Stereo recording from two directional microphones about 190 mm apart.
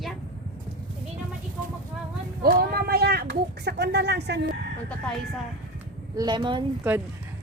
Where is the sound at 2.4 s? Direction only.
50° right (ahead or behind).